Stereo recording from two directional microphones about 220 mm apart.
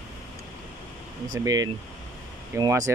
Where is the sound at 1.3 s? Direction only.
15° right (ahead or behind).